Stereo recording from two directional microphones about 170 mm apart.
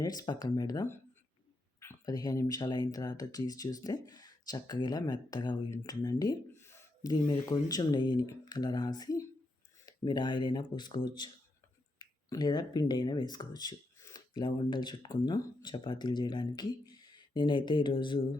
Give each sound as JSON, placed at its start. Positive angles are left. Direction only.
{"t": 0.0, "sound": "speech", "side_deg": 25}